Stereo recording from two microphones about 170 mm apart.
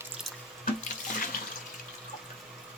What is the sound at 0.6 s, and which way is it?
Water, 55° left (ahead or behind).